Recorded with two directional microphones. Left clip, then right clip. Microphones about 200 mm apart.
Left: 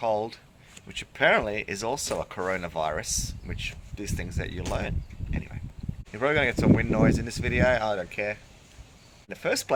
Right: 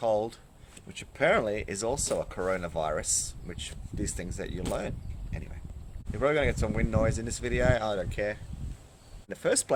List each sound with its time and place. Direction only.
0.0 s speech: 20° right (ahead or behind)
0.9 s speech: 5° right (ahead or behind)